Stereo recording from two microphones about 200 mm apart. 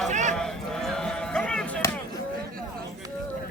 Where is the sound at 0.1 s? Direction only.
35° right (ahead or behind).